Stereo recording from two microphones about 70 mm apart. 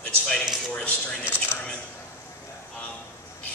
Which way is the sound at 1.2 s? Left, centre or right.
Left.